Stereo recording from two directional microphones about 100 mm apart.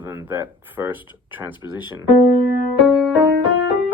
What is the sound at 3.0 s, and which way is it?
Music, 15° right (ahead or behind).